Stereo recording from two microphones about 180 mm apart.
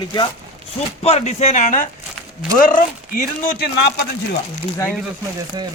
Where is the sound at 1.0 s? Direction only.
35° left (ahead or behind); by 3.9 s 55° left (ahead or behind).